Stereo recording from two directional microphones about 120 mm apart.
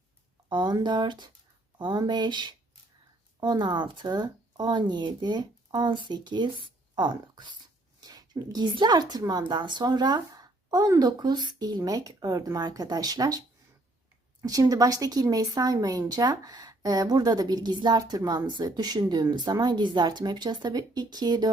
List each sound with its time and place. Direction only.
0.4 s a woman's voice: 40° right (ahead or behind)
14.4 s a woman's voice: 30° right (ahead or behind)